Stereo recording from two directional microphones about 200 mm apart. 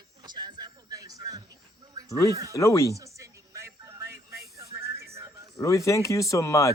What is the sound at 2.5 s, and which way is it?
Speech, 15° left (ahead or behind).